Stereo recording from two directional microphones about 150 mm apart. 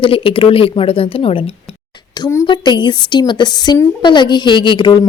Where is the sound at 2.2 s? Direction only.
20° left (ahead or behind).